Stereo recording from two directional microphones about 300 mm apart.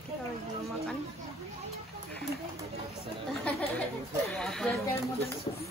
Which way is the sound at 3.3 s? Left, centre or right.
Centre.